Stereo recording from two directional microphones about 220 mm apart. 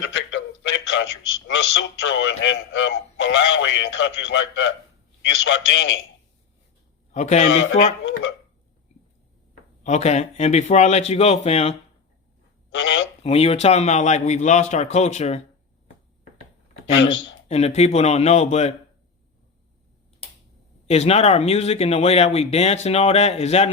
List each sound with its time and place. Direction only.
0.0 s a sound: 55° left (ahead or behind)
1.5 s speech: 55° left (ahead or behind)
7.1 s a man's voice: 35° left (ahead or behind)
7.5 s speech: 55° left (ahead or behind)
9.8 s speech: 30° left (ahead or behind)
12.7 s speech: 55° left (ahead or behind)
13.2 s a man's voice: 25° left (ahead or behind)
17.5 s speech: 30° left (ahead or behind)
20.8 s speech: 25° left (ahead or behind)